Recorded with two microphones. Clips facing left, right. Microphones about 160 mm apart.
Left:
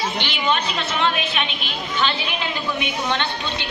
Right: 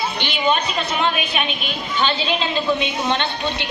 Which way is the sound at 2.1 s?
20° right (ahead or behind).